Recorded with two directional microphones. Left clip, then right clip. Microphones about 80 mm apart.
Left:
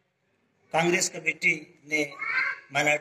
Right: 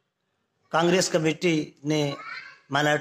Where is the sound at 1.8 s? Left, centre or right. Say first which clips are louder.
Even; right.